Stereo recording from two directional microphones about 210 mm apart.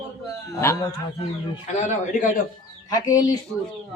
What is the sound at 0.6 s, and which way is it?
Speech, 15° left (ahead or behind).